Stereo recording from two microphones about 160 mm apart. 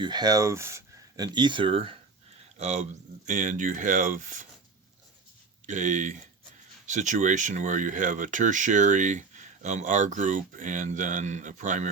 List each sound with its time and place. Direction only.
0.0 s speech: 25° right (ahead or behind)
2.6 s speech: 45° right (ahead or behind)
5.6 s speech: 50° right (ahead or behind)